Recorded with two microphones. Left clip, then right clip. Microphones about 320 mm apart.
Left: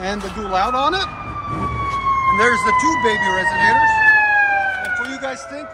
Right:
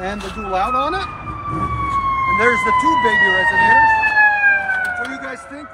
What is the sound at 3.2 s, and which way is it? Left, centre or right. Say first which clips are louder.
Speech: right 3 dB; right.